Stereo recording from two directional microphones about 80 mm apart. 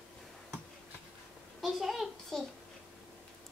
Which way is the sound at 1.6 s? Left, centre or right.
Centre.